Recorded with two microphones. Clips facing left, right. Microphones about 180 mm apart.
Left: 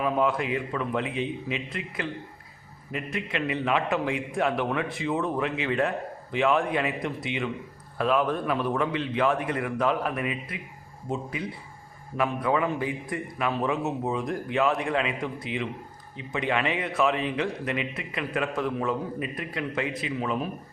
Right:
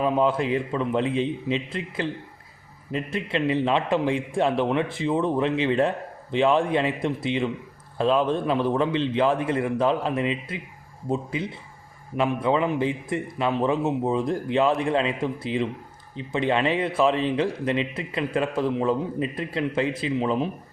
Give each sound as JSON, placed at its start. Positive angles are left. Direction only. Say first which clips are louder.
{"t": 0.0, "sound": "a man's voice", "louder": "right 3 dB", "side_deg": -30}